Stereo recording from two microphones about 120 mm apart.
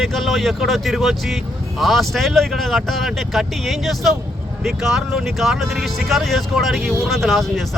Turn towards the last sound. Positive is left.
turn(degrees=0)  # may be behind; listen again after turning